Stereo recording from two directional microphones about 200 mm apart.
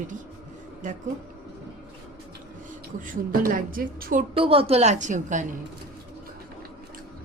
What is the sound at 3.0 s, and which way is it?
A woman's voice, 45° right (ahead or behind).